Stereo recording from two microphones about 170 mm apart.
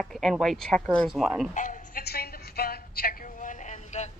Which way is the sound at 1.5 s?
50° left (ahead or behind).